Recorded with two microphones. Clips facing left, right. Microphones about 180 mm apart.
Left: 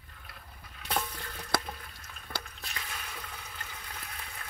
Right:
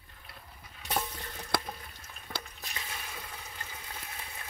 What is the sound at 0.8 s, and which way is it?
Water, 20° right (ahead or behind).